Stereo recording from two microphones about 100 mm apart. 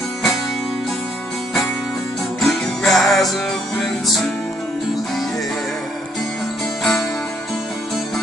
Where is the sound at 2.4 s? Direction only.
5° left (ahead or behind).